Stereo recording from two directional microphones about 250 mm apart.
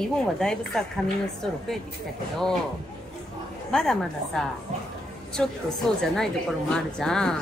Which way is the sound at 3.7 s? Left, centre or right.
Centre.